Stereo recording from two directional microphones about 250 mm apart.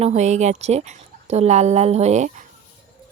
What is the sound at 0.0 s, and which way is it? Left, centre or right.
Speech, right.